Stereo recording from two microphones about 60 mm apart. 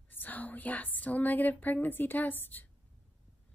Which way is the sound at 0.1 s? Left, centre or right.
Left.